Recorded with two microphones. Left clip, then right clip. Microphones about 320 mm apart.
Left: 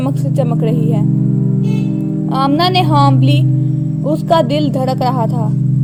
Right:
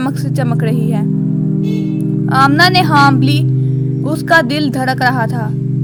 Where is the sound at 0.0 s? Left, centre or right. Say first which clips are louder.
Left 1 dB; right.